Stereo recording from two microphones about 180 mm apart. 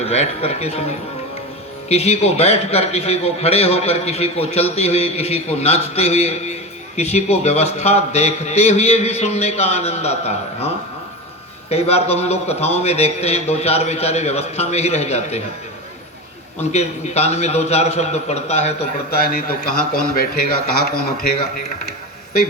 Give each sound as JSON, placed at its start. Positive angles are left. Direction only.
{"t": 0.0, "sound": "a man's voice", "side_deg": 35}
{"t": 11.7, "sound": "a man's voice", "side_deg": 35}
{"t": 16.7, "sound": "a man's voice", "side_deg": 35}
{"t": 19.1, "sound": "a man's voice", "side_deg": 55}